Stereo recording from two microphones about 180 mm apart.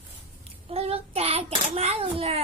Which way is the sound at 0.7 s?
35° right (ahead or behind).